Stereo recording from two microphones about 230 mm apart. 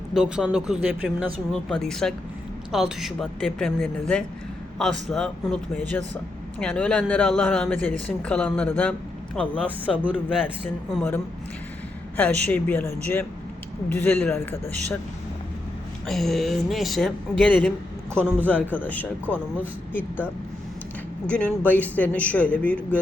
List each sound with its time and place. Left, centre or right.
0.1 s speech: centre
9.6 s speech: centre
10.9 s a man's voice: centre
16.0 s a man's voice: centre
21.2 s a man's voice: centre